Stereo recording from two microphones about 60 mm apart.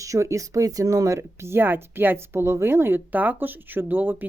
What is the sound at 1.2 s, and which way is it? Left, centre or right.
A woman's voice, right.